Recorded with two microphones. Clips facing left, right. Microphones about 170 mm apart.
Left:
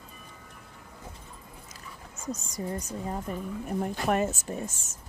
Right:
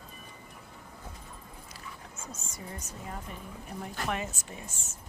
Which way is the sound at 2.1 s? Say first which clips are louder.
Left 13 dB; 15° left (ahead or behind).